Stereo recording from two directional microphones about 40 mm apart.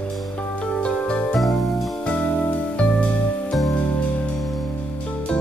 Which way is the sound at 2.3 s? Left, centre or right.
Left.